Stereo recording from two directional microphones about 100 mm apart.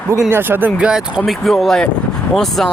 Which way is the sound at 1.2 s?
Centre (ahead or behind).